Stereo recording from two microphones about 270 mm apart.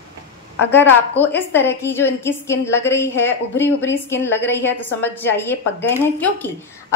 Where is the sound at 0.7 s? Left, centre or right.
Centre.